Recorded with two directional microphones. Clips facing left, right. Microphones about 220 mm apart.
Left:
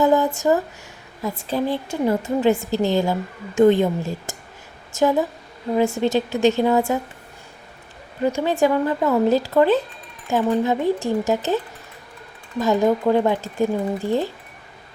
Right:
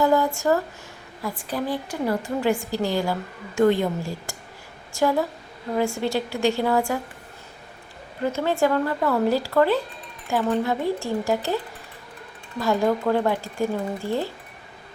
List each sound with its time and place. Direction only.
0.0 s a sound: 20° left (ahead or behind)
1.2 s a woman's voice: 25° left (ahead or behind)
8.2 s a woman's voice: 15° left (ahead or behind)